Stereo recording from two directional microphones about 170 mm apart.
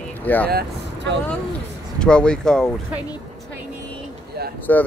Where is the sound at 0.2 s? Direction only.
10° left (ahead or behind).